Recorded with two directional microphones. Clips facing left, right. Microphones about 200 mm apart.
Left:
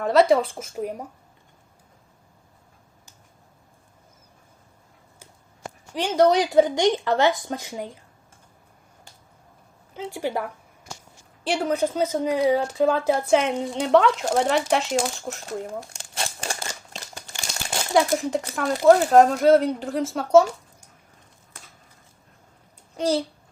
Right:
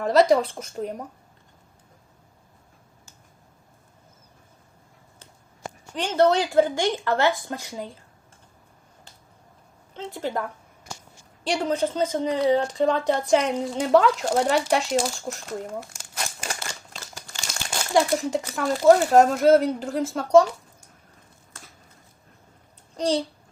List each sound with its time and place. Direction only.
0.0 s speech: centre (ahead or behind)
5.9 s speech: 10° left (ahead or behind)
9.9 s speech: 10° left (ahead or behind)
15.9 s crumpling: 30° left (ahead or behind)
17.9 s speech: centre (ahead or behind)
23.0 s speech: 5° left (ahead or behind)